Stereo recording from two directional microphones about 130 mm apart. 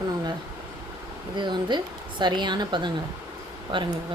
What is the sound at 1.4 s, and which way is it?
A woman's voice, 35° right (ahead or behind).